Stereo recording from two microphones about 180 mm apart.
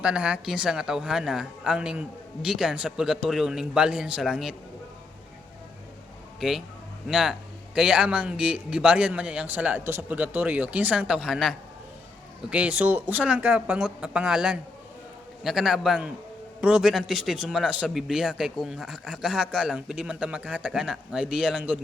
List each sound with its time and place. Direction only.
0.0 s a man's voice: 5° right (ahead or behind)
7.1 s a man's voice: 5° right (ahead or behind)